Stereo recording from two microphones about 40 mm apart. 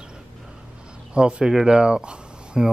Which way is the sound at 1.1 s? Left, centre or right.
Right.